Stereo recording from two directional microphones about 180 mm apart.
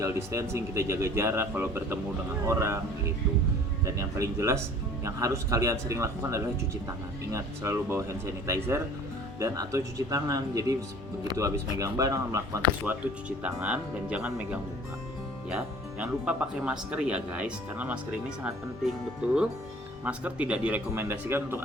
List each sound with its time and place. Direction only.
0.0 s speech: 15° right (ahead or behind)
3.8 s speech: 15° right (ahead or behind)
20.1 s speech: 5° right (ahead or behind)